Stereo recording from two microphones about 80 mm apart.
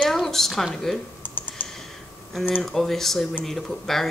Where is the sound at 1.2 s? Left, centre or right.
Left.